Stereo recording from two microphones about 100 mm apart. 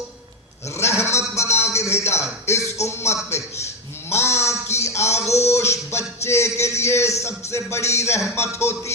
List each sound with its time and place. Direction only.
0.8 s sheep: 25° left (ahead or behind)
1.4 s a sound: 25° left (ahead or behind)
2.5 s music: 30° left (ahead or behind)